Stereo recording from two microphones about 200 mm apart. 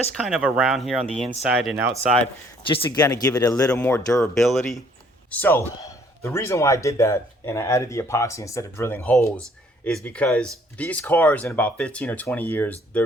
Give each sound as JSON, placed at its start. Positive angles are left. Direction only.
{"t": 0.1, "sound": "speech", "side_deg": 0}
{"t": 1.5, "sound": "speech", "side_deg": -10}
{"t": 2.6, "sound": "a man's voice", "side_deg": 25}
{"t": 4.2, "sound": "a man's voice", "side_deg": 0}